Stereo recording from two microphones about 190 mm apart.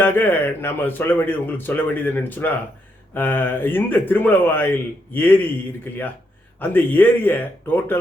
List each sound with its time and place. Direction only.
0.0 s speech: 10° left (ahead or behind)
6.6 s speech: 10° left (ahead or behind)